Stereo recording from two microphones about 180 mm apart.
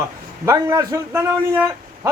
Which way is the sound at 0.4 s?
15° right (ahead or behind).